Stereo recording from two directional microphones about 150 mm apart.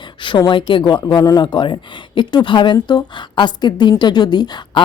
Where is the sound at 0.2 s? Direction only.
30° left (ahead or behind).